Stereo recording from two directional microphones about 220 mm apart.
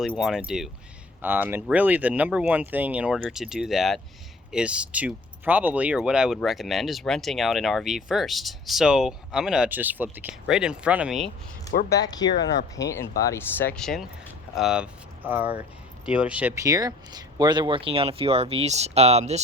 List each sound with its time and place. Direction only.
0.0 s speech: centre (ahead or behind)
11.7 s speech: 40° left (ahead or behind)
11.9 s speech: 15° left (ahead or behind); by 19.4 s 30° right (ahead or behind)